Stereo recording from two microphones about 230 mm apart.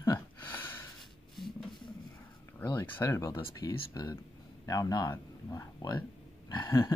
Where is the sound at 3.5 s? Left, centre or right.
Centre.